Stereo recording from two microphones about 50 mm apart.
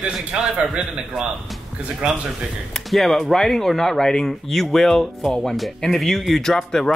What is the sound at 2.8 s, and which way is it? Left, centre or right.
Speech, centre.